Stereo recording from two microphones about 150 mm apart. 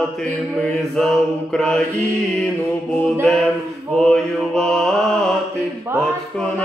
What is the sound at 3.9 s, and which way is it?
Mantra, 5° left (ahead or behind).